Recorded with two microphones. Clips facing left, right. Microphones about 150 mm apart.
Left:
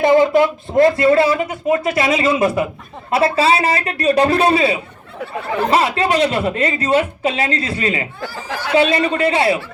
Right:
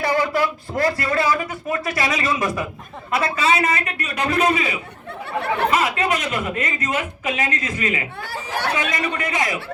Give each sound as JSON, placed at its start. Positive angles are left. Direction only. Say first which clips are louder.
{"t": 0.0, "sound": "a man's voice", "louder": "left 8 dB", "side_deg": 20}
{"t": 5.2, "sound": "speech", "louder": "left 2 dB", "side_deg": -65}
{"t": 5.7, "sound": "a woman's voice", "louder": "left 5 dB", "side_deg": 35}